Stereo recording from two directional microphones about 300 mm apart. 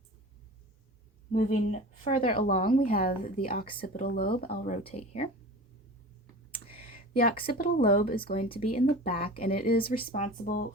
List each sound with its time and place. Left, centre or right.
1.3 s speech: left
6.7 s a sound: left
7.4 s speech: left
8.4 s speech: centre